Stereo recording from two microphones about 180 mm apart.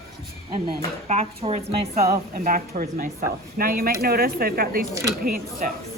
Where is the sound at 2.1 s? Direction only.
55° right (ahead or behind).